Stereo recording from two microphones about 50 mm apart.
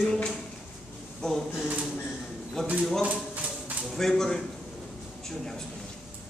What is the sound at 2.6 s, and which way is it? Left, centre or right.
Speech, centre.